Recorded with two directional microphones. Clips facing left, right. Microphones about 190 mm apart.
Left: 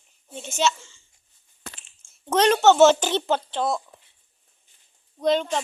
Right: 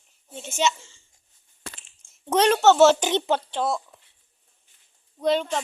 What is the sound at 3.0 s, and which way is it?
Speech, 15° right (ahead or behind).